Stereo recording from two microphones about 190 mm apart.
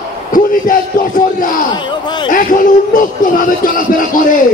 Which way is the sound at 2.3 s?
45° left (ahead or behind).